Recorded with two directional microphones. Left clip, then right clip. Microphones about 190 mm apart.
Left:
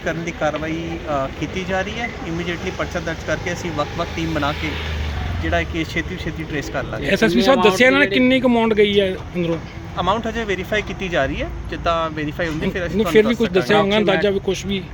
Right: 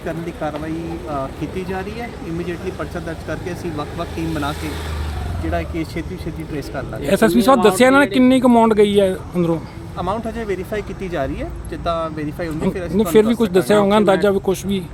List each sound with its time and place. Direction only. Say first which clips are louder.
0.0 s speech: left 3 dB; centre (ahead or behind)
5.5 s speech: left 2 dB; centre (ahead or behind)
7.1 s speech: right 2 dB; 20° right (ahead or behind)
10.0 s speech: left 3 dB; centre (ahead or behind)
13.0 s speech: right 1 dB; 20° right (ahead or behind)